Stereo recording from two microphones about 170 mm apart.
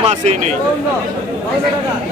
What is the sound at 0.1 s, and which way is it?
Speech, 40° right (ahead or behind).